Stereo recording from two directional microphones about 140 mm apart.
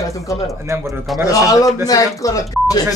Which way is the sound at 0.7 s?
20° right (ahead or behind).